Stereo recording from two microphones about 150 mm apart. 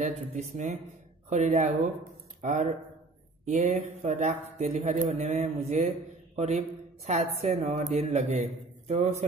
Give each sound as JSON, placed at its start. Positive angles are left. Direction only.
{"t": 0.0, "sound": "a woman's voice", "side_deg": -55}
{"t": 6.3, "sound": "mantra", "side_deg": -45}
{"t": 7.1, "sound": "a woman's voice", "side_deg": -50}